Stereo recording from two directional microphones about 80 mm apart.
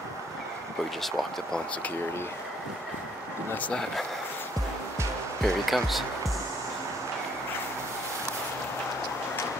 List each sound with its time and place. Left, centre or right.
1.0 s speech: centre
3.5 s speech: centre
5.4 s speech: centre